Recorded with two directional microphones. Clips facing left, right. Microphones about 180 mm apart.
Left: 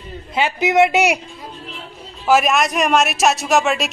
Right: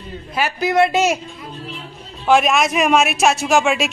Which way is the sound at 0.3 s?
20° left (ahead or behind).